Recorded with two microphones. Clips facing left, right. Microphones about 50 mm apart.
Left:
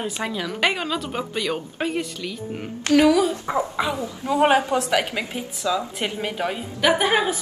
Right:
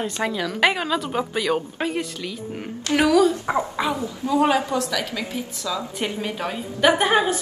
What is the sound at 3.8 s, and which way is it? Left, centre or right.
A woman's voice, left.